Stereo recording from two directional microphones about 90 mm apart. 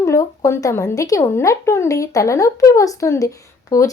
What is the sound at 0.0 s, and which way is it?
Speech, 30° left (ahead or behind).